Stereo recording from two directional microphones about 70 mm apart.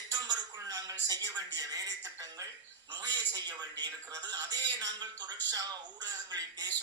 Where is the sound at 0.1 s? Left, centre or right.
Right.